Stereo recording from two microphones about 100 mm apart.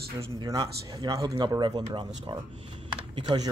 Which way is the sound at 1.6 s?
50° right (ahead or behind).